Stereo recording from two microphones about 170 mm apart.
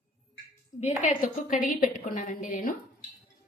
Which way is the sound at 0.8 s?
45° left (ahead or behind).